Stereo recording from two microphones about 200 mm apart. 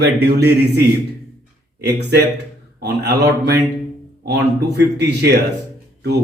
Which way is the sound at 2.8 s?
55° right (ahead or behind).